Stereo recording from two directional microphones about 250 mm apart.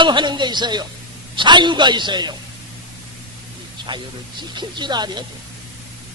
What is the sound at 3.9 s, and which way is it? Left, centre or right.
A man's voice, centre.